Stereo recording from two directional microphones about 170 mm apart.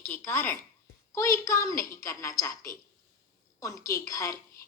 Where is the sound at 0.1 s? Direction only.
10° left (ahead or behind).